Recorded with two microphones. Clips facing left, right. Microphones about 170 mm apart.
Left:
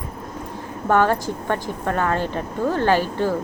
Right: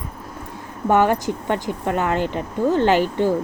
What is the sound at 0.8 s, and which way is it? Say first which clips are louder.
Speech: right 1 dB; 15° right (ahead or behind).